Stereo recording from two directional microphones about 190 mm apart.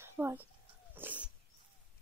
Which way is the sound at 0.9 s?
10° right (ahead or behind).